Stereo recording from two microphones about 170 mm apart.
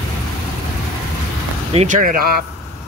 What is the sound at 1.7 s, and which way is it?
Speech, 50° right (ahead or behind).